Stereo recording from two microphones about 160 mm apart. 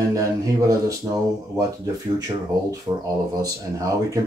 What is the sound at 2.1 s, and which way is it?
Speech, 20° right (ahead or behind).